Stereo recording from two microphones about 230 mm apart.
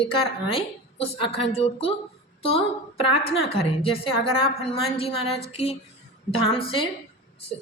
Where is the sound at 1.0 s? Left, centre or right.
Left.